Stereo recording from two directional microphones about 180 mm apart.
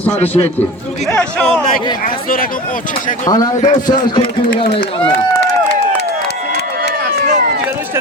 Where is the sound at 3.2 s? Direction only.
20° left (ahead or behind).